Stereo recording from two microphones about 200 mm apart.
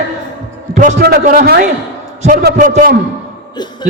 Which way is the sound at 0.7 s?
35° right (ahead or behind).